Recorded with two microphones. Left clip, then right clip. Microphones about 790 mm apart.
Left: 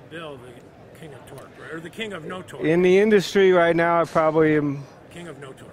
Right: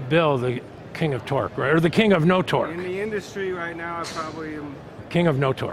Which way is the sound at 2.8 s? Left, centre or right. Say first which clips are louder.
Left 11 dB; left.